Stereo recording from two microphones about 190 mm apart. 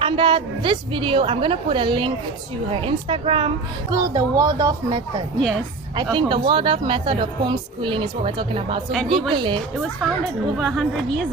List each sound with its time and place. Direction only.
0.0 s speech: 25° right (ahead or behind)
8.9 s a woman's voice: centre (ahead or behind)
9.3 s speech: 25° right (ahead or behind)
10.6 s a woman's voice: centre (ahead or behind)